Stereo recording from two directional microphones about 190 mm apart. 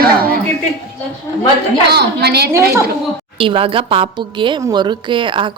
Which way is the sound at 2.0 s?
60° right (ahead or behind).